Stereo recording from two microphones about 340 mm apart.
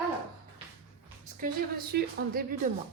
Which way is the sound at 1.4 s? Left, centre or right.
Right.